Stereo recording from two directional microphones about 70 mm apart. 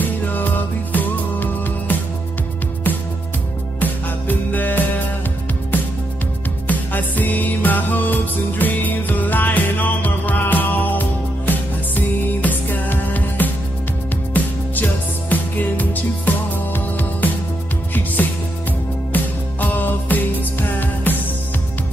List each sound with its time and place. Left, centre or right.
0.0 s music: left
3.8 s music: left
6.7 s music: left
19.1 s music: left